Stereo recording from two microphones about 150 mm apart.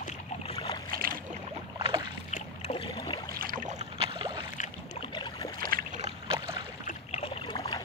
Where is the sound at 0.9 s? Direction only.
75° right (ahead or behind).